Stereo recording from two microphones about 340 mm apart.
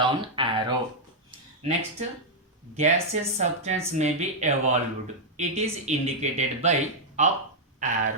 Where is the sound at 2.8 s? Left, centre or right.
Centre.